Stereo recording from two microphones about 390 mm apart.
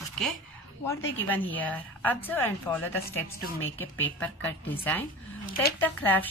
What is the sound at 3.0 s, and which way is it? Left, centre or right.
Speech, left.